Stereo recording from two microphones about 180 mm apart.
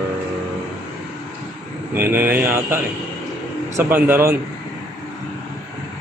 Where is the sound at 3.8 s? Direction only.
10° right (ahead or behind).